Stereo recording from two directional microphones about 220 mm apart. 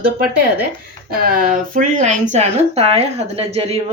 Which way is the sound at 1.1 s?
40° right (ahead or behind).